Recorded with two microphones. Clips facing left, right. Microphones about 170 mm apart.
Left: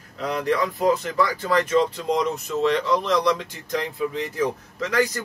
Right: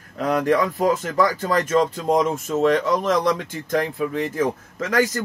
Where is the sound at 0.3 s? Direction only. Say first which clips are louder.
Right 4 dB; 45° right (ahead or behind).